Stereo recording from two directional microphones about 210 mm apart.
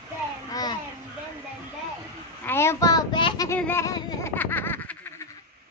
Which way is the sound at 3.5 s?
10° left (ahead or behind).